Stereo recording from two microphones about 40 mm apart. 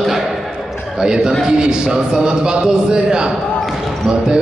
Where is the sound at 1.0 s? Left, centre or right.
Centre.